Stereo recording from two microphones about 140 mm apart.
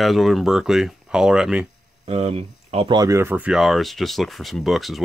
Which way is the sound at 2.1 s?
45° right (ahead or behind).